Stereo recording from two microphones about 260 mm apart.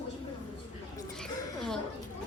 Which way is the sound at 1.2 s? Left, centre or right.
Centre.